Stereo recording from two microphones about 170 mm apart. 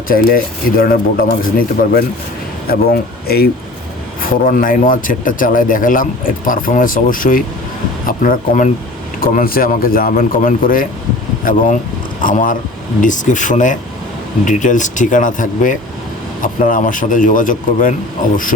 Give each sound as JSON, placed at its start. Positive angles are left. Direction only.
{"t": 0.1, "sound": "speech", "side_deg": 55}
{"t": 4.2, "sound": "speech", "side_deg": 55}